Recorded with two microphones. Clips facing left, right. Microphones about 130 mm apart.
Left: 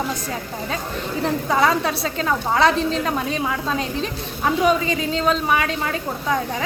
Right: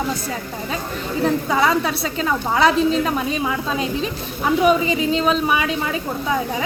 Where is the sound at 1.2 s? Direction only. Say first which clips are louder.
Right 1 dB; centre (ahead or behind).